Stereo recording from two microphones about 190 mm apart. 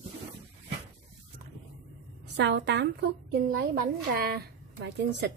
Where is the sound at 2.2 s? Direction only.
65° right (ahead or behind).